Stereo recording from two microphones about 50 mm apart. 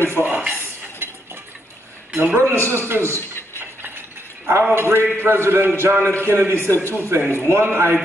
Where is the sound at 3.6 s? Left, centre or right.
Right.